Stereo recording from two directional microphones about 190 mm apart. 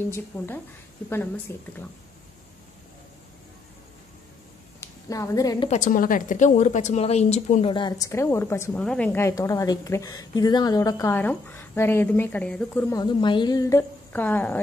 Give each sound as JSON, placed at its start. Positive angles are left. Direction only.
{"t": 1.1, "sound": "a woman's voice", "side_deg": 10}
{"t": 4.7, "sound": "a woman's voice", "side_deg": 15}
{"t": 5.7, "sound": "a woman's voice", "side_deg": 40}
{"t": 7.7, "sound": "a woman's voice", "side_deg": 20}
{"t": 12.9, "sound": "a woman's voice", "side_deg": 25}